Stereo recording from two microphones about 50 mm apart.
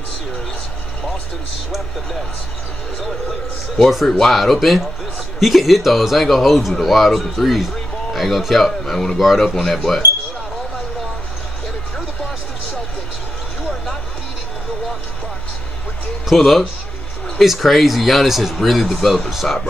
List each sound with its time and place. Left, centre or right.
3.0 s speech: centre
16.3 s speech: centre